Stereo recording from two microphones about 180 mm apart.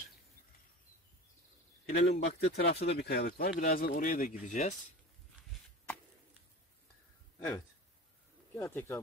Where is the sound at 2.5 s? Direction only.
65° left (ahead or behind); by 4.7 s 45° left (ahead or behind).